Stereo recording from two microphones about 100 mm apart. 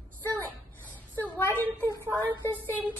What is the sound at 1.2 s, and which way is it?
Speech, 20° left (ahead or behind).